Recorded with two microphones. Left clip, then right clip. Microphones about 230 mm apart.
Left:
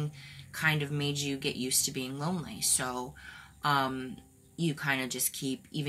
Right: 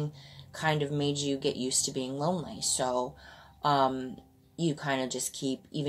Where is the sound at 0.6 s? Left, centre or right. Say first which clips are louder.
Right 1 dB; left.